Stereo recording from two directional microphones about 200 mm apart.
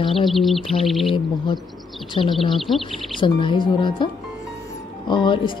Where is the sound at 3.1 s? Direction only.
25° left (ahead or behind).